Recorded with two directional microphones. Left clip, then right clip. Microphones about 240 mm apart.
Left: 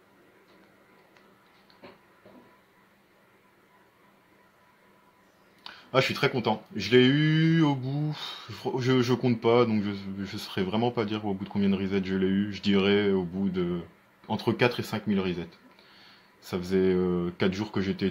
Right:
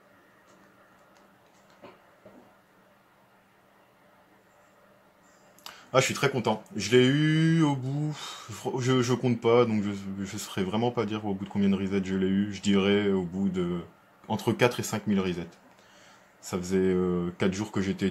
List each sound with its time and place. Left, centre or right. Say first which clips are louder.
5.6 s speech: right 1 dB; centre
16.4 s speech: left 1 dB; centre